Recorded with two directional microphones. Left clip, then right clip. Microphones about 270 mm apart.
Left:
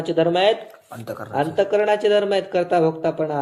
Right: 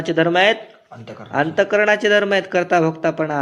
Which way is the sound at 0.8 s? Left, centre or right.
Left.